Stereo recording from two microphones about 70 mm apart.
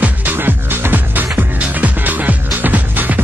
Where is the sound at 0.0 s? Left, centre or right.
Right.